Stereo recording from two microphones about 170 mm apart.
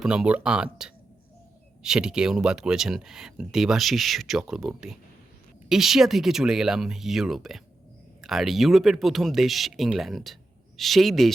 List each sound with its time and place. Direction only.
0.0 s speech: 5° right (ahead or behind)